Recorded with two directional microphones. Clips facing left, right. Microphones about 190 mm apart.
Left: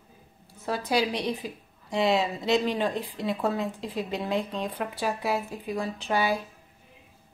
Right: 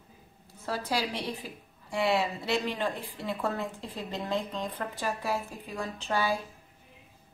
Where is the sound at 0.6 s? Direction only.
15° left (ahead or behind).